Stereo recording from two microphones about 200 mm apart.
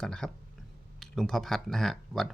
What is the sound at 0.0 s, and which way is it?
Speech, 5° left (ahead or behind).